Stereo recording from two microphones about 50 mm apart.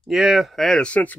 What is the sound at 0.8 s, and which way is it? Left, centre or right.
Speech, left.